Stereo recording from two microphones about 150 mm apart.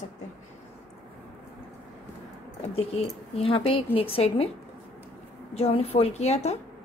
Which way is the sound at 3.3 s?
40° left (ahead or behind).